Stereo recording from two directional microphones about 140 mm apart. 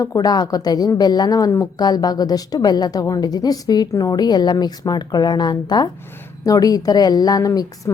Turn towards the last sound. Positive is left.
turn(degrees=25)  # may be behind; listen again after turning